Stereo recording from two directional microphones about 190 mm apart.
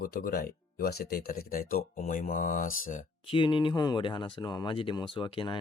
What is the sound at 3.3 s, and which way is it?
Speech, 25° left (ahead or behind).